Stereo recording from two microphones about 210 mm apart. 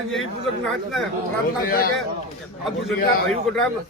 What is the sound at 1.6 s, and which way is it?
Speech, 45° left (ahead or behind).